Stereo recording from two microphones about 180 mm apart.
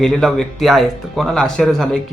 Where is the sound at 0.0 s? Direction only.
5° left (ahead or behind).